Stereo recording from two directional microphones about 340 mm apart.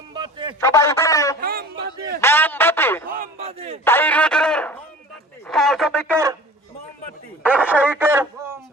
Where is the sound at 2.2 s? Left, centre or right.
Centre.